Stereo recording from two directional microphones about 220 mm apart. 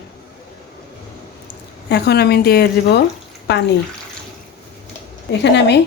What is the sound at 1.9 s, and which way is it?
Speech, 50° left (ahead or behind).